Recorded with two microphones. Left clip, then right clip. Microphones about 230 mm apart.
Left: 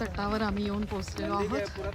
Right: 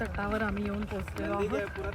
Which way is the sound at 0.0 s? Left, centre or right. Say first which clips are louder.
Left 1 dB; centre.